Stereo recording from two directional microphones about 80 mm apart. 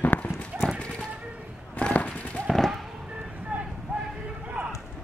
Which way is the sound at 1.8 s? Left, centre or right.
Centre.